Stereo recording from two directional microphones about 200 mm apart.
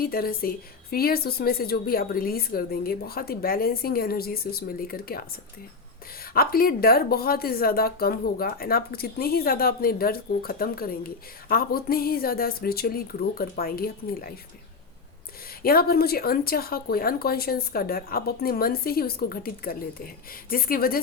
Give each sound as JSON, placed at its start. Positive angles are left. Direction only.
{"t": 0.0, "sound": "speech", "side_deg": 50}
{"t": 6.3, "sound": "speech", "side_deg": 50}
{"t": 15.6, "sound": "speech", "side_deg": 50}